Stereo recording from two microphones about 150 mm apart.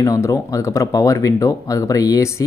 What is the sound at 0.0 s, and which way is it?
Speech, 20° left (ahead or behind).